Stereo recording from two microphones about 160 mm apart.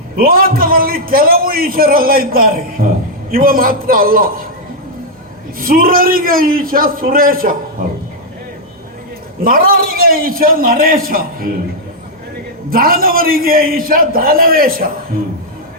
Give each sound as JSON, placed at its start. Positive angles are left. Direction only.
{"t": 0.2, "sound": "a man's voice", "side_deg": -65}
{"t": 5.5, "sound": "a man's voice", "side_deg": -65}
{"t": 9.4, "sound": "a man's voice", "side_deg": -65}
{"t": 12.7, "sound": "a man's voice", "side_deg": -65}